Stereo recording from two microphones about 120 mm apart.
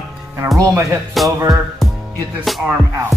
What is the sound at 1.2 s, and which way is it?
Music, centre (ahead or behind).